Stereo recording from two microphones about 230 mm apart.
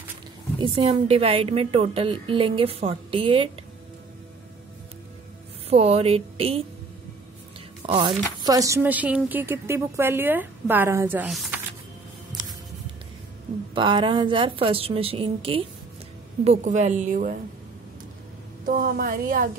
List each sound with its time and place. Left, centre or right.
0.6 s a woman's voice: right
5.7 s a woman's voice: right
7.8 s a woman's voice: right; by 11.5 s centre
13.7 s a woman's voice: right
18.7 s a woman's voice: right